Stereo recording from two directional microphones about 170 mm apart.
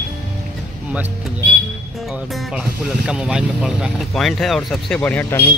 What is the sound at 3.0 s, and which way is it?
Speech, 5° right (ahead or behind).